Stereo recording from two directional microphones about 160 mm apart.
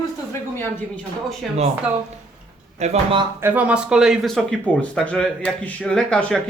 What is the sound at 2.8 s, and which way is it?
Speech, 40° right (ahead or behind).